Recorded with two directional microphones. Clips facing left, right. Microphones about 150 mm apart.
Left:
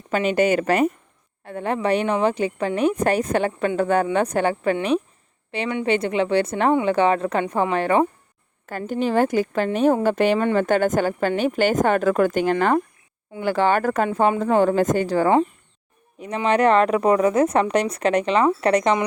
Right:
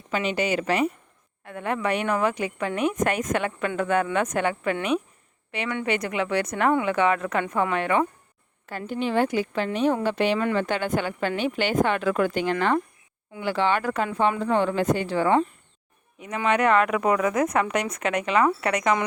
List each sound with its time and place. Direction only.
0.1 s speech: 50° left (ahead or behind)
1.5 s a woman's voice: 30° left (ahead or behind)